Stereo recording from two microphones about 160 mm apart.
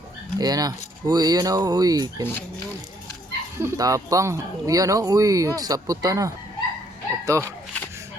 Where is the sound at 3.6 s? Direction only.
20° right (ahead or behind).